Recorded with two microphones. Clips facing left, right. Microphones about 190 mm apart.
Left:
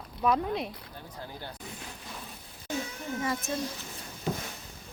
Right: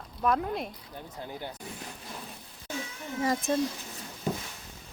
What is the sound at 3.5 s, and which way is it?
Speech, 50° right (ahead or behind).